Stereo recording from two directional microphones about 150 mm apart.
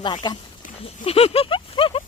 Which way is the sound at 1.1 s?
40° left (ahead or behind).